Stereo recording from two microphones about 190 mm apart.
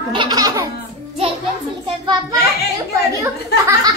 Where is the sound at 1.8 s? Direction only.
20° right (ahead or behind).